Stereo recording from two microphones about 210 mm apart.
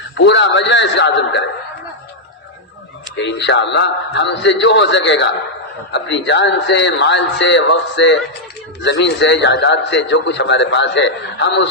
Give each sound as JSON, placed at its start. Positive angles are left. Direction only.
{"t": 0.3, "sound": "a man's voice", "side_deg": 60}
{"t": 3.2, "sound": "a man's voice", "side_deg": 55}